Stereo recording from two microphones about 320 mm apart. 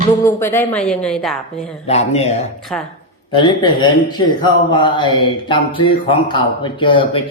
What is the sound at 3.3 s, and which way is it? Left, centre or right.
A man's voice, centre.